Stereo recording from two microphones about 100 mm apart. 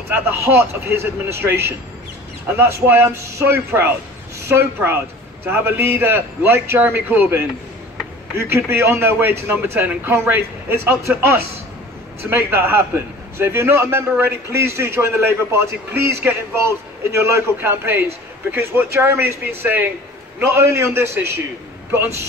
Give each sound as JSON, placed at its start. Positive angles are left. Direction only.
{"t": 0.1, "sound": "a man's voice", "side_deg": -20}
{"t": 12.2, "sound": "a man's voice", "side_deg": -25}